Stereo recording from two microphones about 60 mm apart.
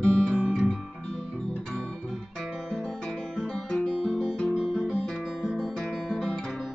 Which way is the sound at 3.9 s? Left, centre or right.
Centre.